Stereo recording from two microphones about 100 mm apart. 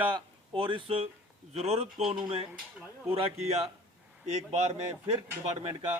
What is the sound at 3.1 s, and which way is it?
Speech, 90° right.